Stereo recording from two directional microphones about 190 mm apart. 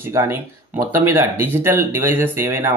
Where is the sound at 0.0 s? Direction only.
15° right (ahead or behind).